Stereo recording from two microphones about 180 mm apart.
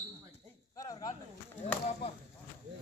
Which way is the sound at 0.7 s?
20° left (ahead or behind).